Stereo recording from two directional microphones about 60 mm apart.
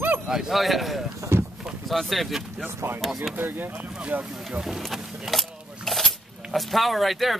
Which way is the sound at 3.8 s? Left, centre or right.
Centre.